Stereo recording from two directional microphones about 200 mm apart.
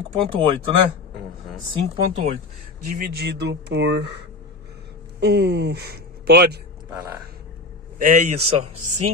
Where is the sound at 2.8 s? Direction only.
45° right (ahead or behind).